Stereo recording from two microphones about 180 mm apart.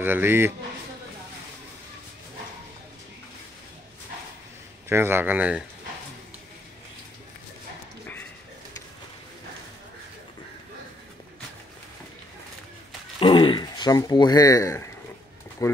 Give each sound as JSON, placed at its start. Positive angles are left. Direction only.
{"t": 0.0, "sound": "speech", "side_deg": -10}
{"t": 4.8, "sound": "speech", "side_deg": -15}
{"t": 13.2, "sound": "speech", "side_deg": 30}